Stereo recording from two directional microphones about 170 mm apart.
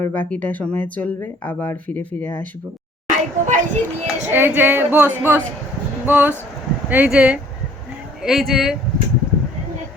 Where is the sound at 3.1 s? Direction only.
45° right (ahead or behind).